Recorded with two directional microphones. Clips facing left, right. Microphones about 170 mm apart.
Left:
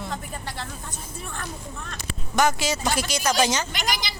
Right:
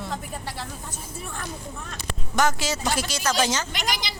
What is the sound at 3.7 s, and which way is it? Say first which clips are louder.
Speech: left 1 dB; 25° right (ahead or behind).